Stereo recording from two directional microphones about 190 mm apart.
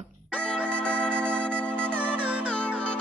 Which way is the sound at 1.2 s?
5° left (ahead or behind).